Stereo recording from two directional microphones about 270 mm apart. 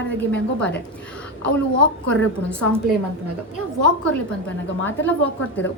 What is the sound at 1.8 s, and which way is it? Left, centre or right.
Speech, centre.